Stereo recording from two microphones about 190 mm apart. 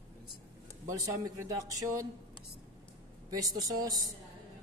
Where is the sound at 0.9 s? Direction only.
15° right (ahead or behind).